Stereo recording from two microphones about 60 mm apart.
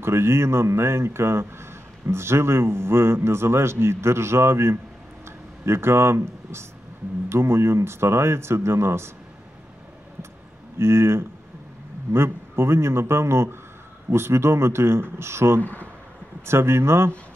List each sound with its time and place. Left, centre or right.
0.0 s speech: right
10.8 s speech: right
15.6 s speech: left
16.4 s speech: right